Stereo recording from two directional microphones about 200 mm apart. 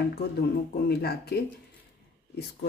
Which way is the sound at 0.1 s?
50° left (ahead or behind).